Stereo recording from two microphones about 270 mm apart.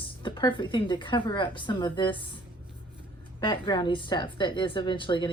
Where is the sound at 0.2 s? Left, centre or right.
Centre.